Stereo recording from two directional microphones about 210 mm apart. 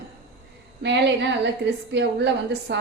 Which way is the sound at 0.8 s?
55° right (ahead or behind).